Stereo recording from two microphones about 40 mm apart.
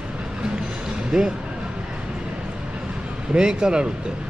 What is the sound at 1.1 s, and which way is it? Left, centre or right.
Speech, centre.